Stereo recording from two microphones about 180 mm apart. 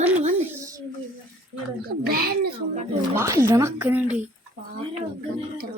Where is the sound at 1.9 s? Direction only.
55° right (ahead or behind).